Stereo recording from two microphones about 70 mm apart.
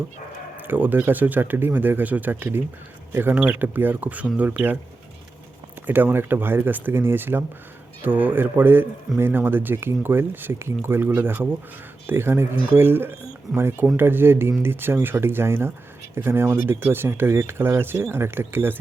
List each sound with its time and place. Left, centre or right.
0.5 s speech: right
5.8 s a man's voice: right